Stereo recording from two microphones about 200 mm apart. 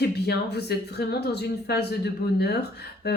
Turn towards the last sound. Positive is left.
turn(degrees=55)  # may be behind; listen again after turning